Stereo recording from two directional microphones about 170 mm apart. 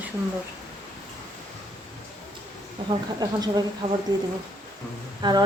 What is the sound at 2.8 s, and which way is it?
Speech, 25° right (ahead or behind).